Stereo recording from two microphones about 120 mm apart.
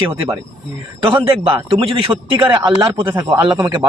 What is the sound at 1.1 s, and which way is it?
A man's voice, 45° right (ahead or behind).